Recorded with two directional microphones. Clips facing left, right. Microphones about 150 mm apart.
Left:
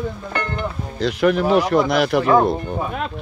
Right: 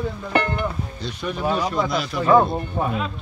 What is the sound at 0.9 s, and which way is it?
Speech, 90° left.